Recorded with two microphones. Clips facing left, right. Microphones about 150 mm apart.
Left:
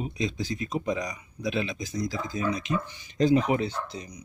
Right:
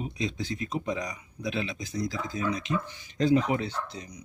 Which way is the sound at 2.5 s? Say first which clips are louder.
Left 1 dB; 15° left (ahead or behind).